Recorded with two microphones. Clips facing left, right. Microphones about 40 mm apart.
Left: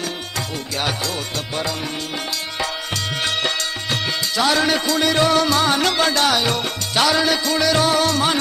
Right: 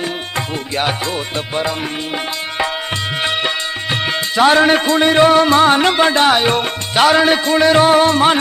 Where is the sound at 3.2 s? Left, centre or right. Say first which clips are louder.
Right 3 dB; right.